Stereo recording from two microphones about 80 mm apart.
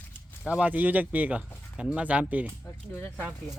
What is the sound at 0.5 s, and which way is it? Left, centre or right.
Speech, centre.